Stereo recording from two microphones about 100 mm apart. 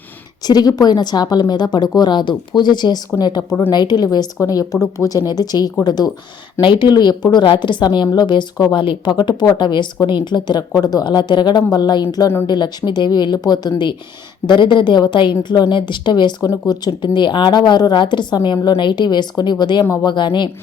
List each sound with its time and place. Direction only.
0.4 s a woman's voice: 40° left (ahead or behind)
19.8 s speech: 30° left (ahead or behind)
20.1 s a woman's voice: 50° left (ahead or behind)